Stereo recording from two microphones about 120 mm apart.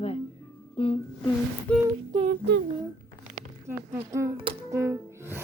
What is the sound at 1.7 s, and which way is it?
Humming, 10° left (ahead or behind).